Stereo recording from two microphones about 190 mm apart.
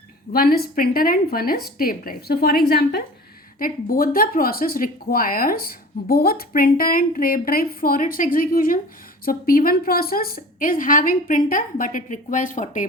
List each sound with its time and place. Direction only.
0.3 s speech: 50° left (ahead or behind)